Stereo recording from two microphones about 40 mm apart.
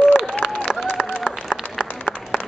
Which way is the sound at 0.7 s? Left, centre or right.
Centre.